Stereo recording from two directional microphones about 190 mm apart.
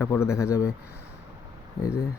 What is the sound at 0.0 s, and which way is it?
Speech, 15° left (ahead or behind).